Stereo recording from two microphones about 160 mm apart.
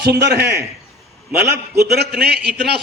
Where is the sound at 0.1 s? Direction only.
90° right.